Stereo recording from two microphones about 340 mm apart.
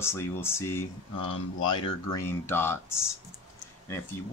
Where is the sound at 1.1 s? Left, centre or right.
Left.